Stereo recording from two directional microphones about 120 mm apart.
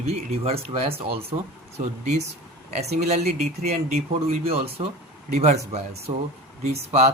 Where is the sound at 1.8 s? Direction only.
75° right (ahead or behind).